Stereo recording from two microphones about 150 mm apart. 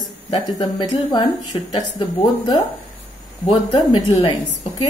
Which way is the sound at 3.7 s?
35° left (ahead or behind).